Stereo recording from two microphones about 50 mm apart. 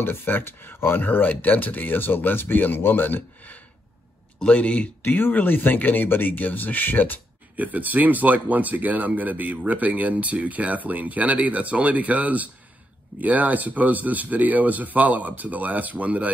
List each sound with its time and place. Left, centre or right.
0.0 s speech: left
4.4 s speech: left
5.0 s speech: left
7.5 s speech: right